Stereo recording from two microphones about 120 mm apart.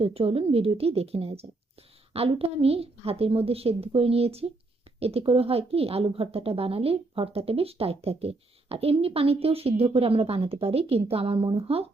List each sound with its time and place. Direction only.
0.0 s a woman's voice: 55° right (ahead or behind)